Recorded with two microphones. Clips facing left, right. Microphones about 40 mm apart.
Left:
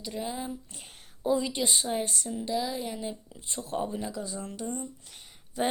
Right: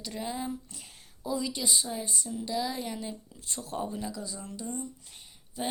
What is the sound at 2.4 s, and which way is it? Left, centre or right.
Speech, centre.